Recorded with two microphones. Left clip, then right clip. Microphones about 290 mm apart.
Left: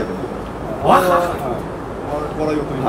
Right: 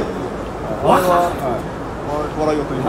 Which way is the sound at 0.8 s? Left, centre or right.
Centre.